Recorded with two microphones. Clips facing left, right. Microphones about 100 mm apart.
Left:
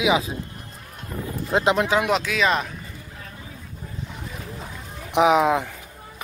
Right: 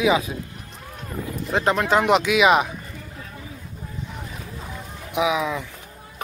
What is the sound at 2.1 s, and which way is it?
Speech, 5° right (ahead or behind).